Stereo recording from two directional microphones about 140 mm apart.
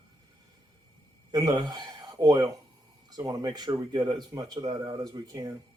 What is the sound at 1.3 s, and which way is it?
Speech, 25° right (ahead or behind).